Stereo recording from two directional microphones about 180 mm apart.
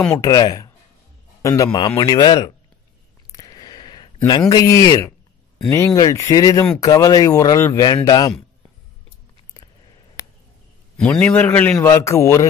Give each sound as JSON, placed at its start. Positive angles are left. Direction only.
{"t": 0.2, "sound": "speech", "side_deg": 20}
{"t": 3.3, "sound": "a sound", "side_deg": 20}
{"t": 5.7, "sound": "speech", "side_deg": 20}
{"t": 11.0, "sound": "a man's voice", "side_deg": 5}